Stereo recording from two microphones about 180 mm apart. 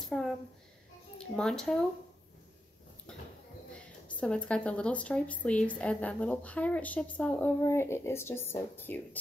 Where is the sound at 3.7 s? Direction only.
5° left (ahead or behind).